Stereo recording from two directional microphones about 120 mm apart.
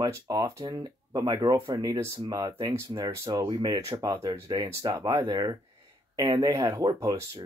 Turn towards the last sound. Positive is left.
turn(degrees=-30)  # may be behind; listen again after turning